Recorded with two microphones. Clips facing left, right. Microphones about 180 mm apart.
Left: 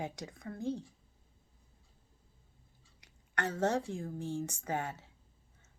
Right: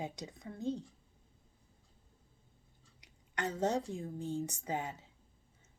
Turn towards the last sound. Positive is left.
turn(degrees=-15)  # may be behind; listen again after turning